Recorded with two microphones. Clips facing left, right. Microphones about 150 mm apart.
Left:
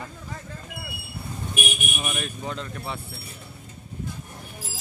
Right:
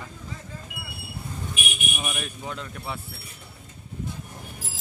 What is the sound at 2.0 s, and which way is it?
Speech, 5° right (ahead or behind).